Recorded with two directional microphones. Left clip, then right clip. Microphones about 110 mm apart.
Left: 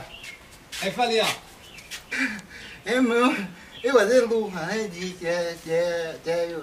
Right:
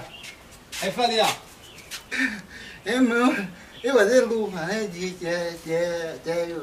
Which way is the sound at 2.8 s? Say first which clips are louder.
Even; centre (ahead or behind).